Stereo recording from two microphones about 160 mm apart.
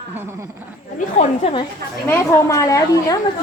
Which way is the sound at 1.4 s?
35° left (ahead or behind).